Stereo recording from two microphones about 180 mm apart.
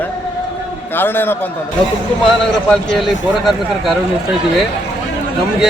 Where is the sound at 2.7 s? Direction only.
5° left (ahead or behind).